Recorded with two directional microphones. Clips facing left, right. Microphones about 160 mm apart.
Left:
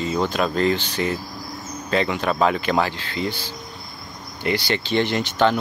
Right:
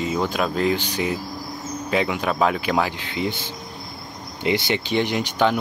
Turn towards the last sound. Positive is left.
turn(degrees=-10)  # may be behind; listen again after turning